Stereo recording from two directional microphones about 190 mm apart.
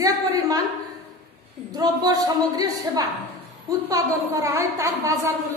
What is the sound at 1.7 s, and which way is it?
A woman's voice, 20° right (ahead or behind).